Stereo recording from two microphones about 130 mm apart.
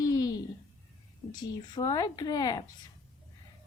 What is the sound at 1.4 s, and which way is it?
Speech, 30° left (ahead or behind).